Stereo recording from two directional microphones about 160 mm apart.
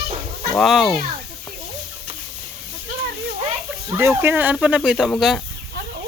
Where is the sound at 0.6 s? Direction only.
Centre (ahead or behind).